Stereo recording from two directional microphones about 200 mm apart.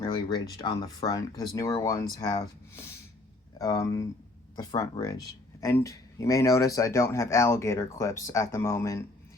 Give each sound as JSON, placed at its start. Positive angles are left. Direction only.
{"t": 0.0, "sound": "speech", "side_deg": 20}